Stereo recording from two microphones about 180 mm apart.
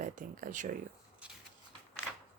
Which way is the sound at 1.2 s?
5° right (ahead or behind).